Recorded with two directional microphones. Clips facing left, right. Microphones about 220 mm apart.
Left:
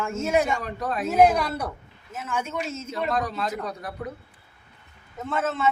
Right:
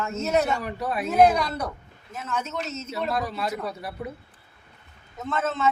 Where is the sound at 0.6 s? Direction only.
10° right (ahead or behind).